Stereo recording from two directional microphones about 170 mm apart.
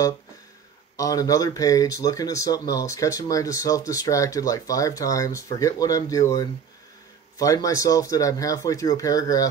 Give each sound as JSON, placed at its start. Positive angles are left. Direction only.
{"t": 0.9, "sound": "speech", "side_deg": 20}